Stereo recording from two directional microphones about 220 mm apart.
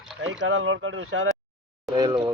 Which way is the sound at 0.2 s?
60° right (ahead or behind).